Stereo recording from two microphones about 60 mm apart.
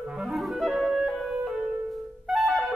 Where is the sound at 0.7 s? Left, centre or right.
Centre.